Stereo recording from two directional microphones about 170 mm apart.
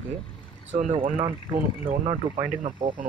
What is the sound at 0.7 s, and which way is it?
Speech, 45° right (ahead or behind).